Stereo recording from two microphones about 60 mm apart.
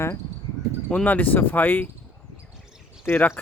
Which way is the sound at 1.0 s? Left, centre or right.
Left.